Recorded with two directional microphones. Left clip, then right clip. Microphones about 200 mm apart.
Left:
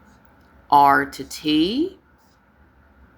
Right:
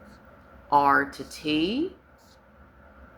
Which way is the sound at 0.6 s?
50° left (ahead or behind).